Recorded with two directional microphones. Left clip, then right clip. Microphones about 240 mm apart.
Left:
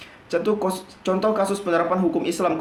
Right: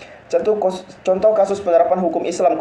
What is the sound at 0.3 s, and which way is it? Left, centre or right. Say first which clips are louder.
Speech: right 6 dB; left.